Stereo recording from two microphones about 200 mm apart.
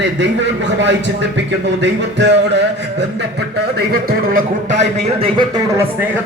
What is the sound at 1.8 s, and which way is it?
Music, 60° right (ahead or behind).